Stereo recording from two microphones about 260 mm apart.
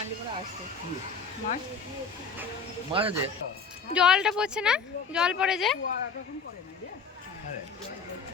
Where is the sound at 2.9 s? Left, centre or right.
Right.